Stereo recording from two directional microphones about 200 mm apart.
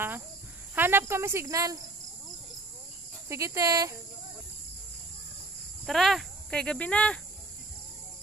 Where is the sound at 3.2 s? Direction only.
15° right (ahead or behind).